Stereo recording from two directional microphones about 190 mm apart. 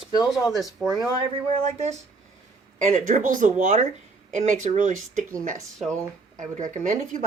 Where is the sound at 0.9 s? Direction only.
25° right (ahead or behind); by 5.2 s 40° right (ahead or behind).